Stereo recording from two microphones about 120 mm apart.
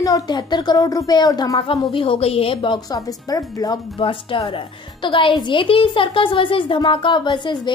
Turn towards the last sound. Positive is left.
turn(degrees=40)  # may be behind; listen again after turning